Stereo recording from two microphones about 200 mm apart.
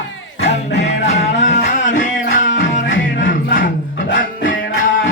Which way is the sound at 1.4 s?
40° left (ahead or behind).